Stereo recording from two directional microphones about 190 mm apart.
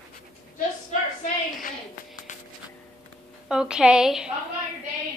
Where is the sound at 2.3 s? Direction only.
40° left (ahead or behind).